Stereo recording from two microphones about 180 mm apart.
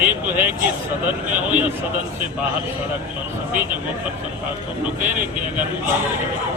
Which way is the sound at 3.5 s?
10° right (ahead or behind).